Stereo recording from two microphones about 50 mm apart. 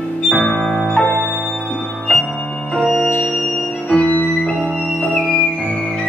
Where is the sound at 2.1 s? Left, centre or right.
Left.